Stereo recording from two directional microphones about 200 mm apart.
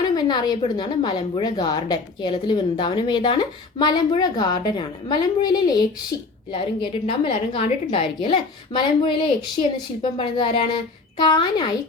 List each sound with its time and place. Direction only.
0.0 s speech: 20° left (ahead or behind)
6.1 s a woman's voice: 50° left (ahead or behind)
6.5 s speech: 25° left (ahead or behind)